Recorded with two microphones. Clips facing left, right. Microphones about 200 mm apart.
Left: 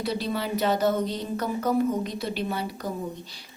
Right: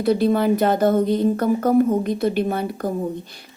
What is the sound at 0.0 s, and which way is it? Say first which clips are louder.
A woman's voice: right 11 dB; 50° right (ahead or behind).